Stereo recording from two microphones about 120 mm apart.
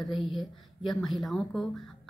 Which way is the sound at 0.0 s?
Centre (ahead or behind).